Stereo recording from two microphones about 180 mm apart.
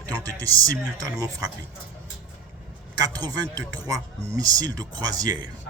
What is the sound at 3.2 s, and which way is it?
Speech, 20° right (ahead or behind).